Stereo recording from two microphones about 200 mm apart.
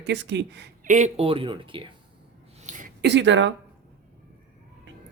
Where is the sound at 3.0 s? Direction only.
60° right (ahead or behind).